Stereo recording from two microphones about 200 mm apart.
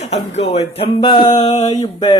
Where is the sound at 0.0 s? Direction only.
35° left (ahead or behind).